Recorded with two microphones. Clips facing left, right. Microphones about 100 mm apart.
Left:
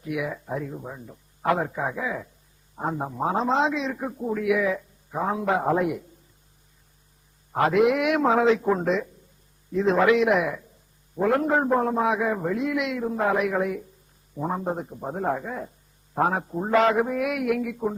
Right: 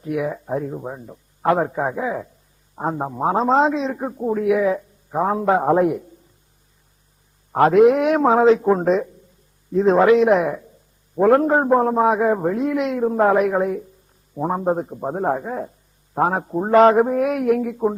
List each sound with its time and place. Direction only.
0.0 s a man's voice: 35° right (ahead or behind)
7.5 s a man's voice: 40° right (ahead or behind)